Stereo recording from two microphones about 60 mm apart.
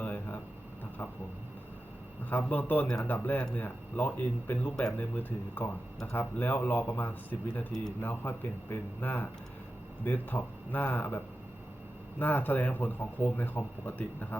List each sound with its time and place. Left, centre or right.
0.0 s a sound: left
2.5 s speech: left
12.2 s speech: left